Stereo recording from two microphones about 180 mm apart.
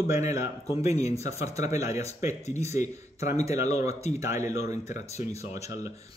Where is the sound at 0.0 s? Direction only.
15° right (ahead or behind).